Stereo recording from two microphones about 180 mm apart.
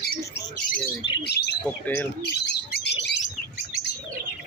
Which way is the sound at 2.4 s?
70° left (ahead or behind).